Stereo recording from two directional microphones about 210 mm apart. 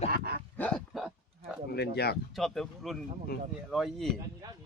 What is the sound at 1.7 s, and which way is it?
Speech, 50° left (ahead or behind).